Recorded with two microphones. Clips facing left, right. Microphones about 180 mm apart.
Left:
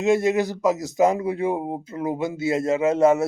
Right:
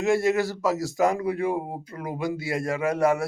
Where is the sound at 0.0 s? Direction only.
20° left (ahead or behind).